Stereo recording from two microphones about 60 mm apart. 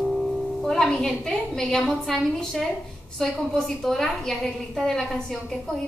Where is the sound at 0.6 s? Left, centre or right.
Centre.